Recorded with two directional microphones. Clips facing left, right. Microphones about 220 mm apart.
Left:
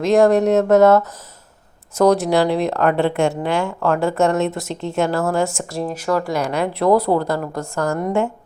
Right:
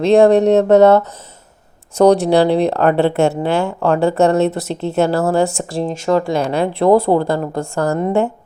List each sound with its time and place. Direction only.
0.0 s speech: 30° right (ahead or behind)